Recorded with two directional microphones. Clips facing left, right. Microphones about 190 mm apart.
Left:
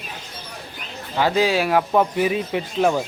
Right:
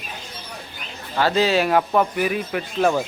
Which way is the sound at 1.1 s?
10° left (ahead or behind).